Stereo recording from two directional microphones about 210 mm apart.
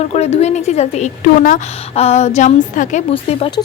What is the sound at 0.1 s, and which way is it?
A woman's voice, 30° left (ahead or behind).